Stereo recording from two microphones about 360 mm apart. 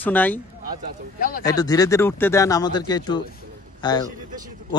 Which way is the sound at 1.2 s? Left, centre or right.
Left.